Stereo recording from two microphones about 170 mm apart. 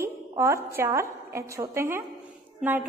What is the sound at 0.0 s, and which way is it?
A woman's voice, 15° right (ahead or behind).